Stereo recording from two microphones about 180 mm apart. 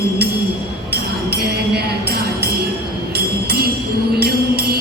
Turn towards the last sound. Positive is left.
turn(degrees=-60)  # may be behind; listen again after turning